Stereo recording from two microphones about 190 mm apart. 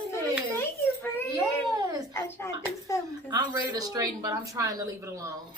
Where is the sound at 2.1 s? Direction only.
15° left (ahead or behind).